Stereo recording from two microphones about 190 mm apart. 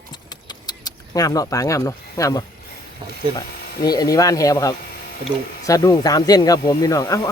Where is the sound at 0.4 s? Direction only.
20° left (ahead or behind).